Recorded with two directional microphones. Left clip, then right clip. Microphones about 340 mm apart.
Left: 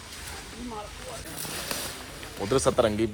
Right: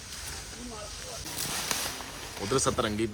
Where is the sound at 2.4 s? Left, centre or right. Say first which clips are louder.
Left 5 dB; centre.